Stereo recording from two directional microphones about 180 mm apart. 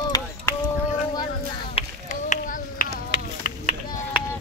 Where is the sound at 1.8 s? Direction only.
45° left (ahead or behind).